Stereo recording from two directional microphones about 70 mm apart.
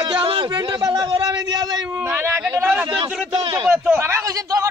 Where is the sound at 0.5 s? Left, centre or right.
Right.